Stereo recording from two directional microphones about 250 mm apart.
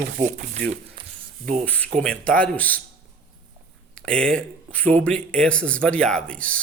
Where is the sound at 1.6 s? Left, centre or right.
Centre.